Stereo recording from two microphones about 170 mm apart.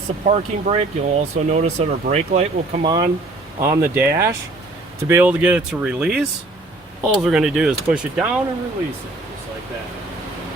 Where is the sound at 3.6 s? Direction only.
15° right (ahead or behind).